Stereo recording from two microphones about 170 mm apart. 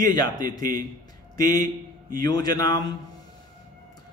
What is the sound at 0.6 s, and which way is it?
Speech, 55° right (ahead or behind).